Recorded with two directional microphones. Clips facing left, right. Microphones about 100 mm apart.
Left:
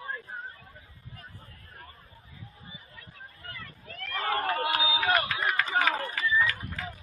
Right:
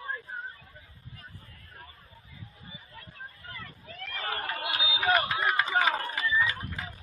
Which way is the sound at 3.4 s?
Centre (ahead or behind).